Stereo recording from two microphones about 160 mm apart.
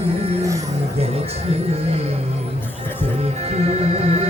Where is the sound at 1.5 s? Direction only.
40° right (ahead or behind).